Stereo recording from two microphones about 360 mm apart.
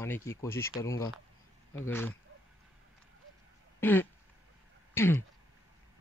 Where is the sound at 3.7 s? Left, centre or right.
Centre.